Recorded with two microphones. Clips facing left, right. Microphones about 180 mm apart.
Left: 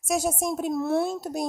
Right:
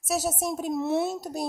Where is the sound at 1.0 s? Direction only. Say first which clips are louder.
Left 1 dB; 10° right (ahead or behind).